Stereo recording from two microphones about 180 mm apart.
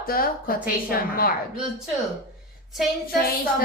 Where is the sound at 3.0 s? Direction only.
55° left (ahead or behind).